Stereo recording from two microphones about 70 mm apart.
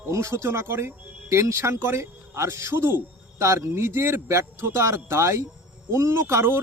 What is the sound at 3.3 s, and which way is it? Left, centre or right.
Speech, right.